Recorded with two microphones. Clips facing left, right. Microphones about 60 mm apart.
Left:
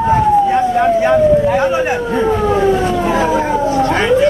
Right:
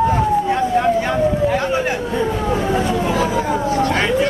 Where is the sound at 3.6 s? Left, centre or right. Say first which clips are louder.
Left 4 dB; left.